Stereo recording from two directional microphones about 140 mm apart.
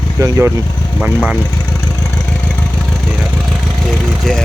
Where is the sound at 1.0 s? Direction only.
5° right (ahead or behind).